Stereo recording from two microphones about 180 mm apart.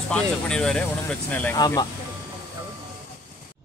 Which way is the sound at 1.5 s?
20° left (ahead or behind).